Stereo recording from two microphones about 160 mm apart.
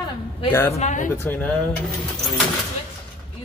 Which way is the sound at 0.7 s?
50° left (ahead or behind).